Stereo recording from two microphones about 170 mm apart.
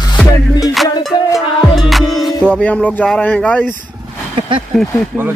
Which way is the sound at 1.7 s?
Centre (ahead or behind).